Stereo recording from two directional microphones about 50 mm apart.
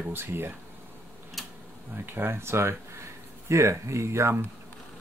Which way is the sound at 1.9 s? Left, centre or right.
Right.